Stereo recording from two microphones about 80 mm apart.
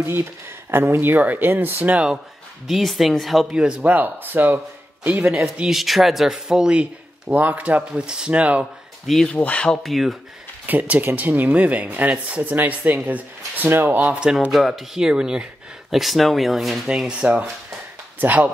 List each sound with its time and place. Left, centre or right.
0.0 s speech: right
2.7 s speech: centre
3.6 s speech: centre
5.2 s speech: centre
9.0 s speech: centre
9.3 s speech: centre
9.8 s speech: centre
10.7 s speech: right